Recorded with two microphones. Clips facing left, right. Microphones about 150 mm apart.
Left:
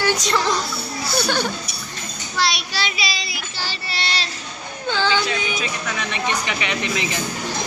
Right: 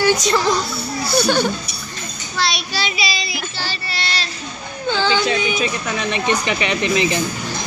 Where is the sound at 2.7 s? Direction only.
5° right (ahead or behind).